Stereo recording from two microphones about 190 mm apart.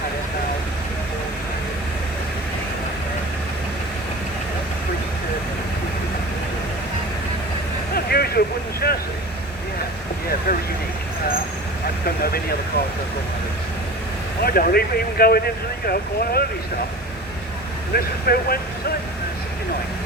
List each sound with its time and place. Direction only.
7.9 s vehicle: 55° left (ahead or behind)
12.0 s vehicle: 50° left (ahead or behind)
14.4 s speech: 55° left (ahead or behind)
17.9 s speech: 55° left (ahead or behind)